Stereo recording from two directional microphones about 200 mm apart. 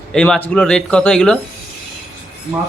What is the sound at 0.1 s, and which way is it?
Speech, 5° left (ahead or behind).